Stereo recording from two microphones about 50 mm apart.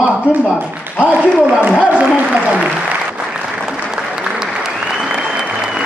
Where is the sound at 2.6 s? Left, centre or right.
Right.